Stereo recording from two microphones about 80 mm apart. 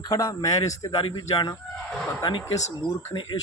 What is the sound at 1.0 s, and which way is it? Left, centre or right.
Speech, left.